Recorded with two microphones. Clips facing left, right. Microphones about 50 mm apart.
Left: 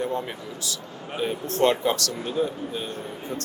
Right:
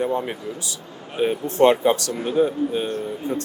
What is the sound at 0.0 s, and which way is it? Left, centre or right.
Speech, right.